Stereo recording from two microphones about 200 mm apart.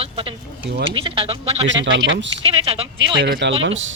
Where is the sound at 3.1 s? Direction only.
60° right (ahead or behind).